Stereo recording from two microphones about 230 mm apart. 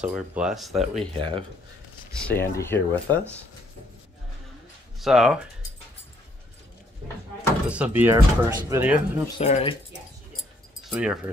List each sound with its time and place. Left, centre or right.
0.0 s speech: centre
1.1 s speech: right
2.1 s speech: centre
5.0 s speech: centre
7.6 s speech: centre
9.4 s speech: left
10.8 s speech: centre